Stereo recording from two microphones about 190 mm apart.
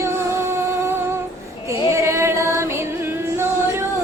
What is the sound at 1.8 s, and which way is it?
Music, 15° right (ahead or behind).